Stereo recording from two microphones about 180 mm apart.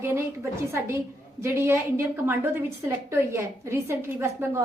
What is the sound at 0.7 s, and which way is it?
A woman's voice, 15° right (ahead or behind).